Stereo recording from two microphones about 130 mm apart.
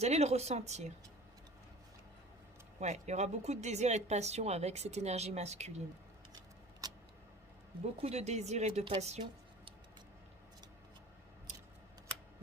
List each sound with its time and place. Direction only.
0.0 s speech: 55° right (ahead or behind)
2.8 s speech: 60° right (ahead or behind)
6.8 s vehicle: 30° right (ahead or behind)
7.9 s speech: 50° right (ahead or behind)